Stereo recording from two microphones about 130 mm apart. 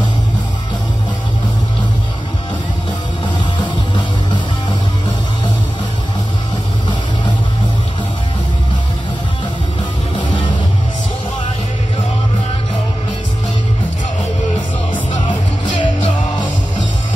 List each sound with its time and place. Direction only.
15.8 s music: 40° left (ahead or behind)